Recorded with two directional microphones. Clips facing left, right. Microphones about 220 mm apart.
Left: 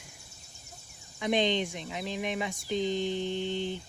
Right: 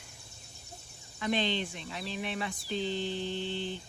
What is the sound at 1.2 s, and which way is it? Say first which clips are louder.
Speech: left 4 dB; 15° left (ahead or behind).